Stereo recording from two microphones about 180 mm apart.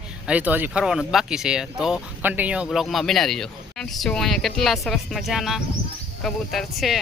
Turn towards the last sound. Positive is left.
turn(degrees=0)  # may be behind; listen again after turning